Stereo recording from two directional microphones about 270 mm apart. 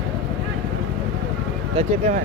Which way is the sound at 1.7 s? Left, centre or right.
Right.